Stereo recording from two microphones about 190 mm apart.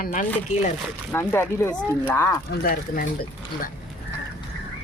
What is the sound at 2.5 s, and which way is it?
Speech, 50° left (ahead or behind).